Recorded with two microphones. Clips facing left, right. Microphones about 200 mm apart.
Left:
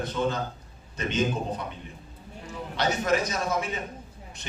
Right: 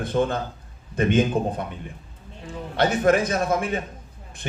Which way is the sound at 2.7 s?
55° right (ahead or behind).